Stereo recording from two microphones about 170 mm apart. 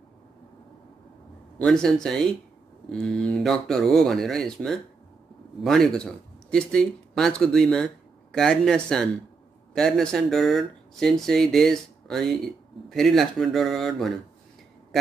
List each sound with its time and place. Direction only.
1.6 s speech: 5° left (ahead or behind)